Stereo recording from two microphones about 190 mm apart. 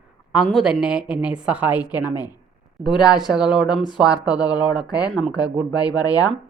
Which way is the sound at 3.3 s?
5° right (ahead or behind).